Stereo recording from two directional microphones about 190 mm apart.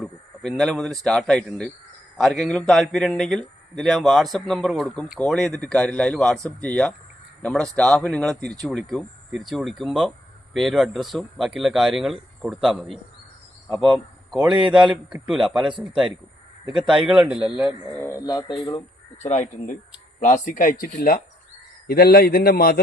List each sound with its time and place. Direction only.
0.0 s a man's voice: centre (ahead or behind)
17.1 s a man's voice: 5° right (ahead or behind)
18.0 s speech: 15° left (ahead or behind)
19.2 s a man's voice: 40° left (ahead or behind)